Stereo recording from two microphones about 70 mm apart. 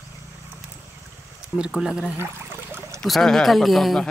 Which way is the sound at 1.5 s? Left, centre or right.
Centre.